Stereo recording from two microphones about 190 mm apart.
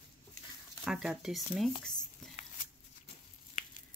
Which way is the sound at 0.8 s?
Centre (ahead or behind).